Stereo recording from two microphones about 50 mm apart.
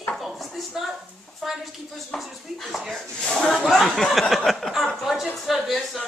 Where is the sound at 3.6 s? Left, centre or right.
Centre.